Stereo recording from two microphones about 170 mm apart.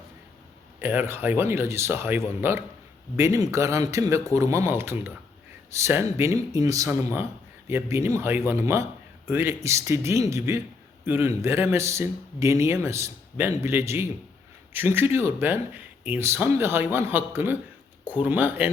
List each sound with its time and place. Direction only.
0.8 s speech: 15° right (ahead or behind)